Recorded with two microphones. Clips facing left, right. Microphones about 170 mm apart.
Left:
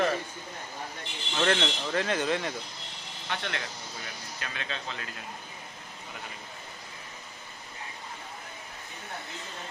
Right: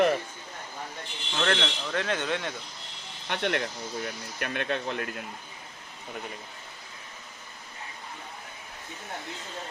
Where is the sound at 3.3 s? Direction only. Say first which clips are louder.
Right 7 dB; 55° right (ahead or behind).